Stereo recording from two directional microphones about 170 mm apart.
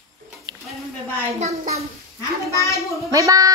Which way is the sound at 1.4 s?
40° right (ahead or behind).